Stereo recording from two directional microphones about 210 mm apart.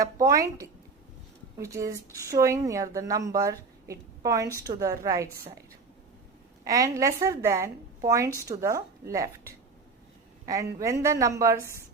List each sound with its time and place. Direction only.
0.0 s speech: 15° right (ahead or behind)
6.7 s speech: 15° right (ahead or behind)
10.4 s speech: 15° right (ahead or behind)